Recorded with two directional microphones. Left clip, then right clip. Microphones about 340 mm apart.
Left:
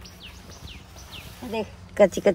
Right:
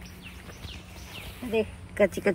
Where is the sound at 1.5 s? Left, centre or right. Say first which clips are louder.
Right 1 dB; left.